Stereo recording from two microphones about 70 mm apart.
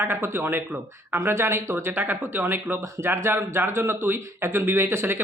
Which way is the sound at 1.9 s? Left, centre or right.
Right.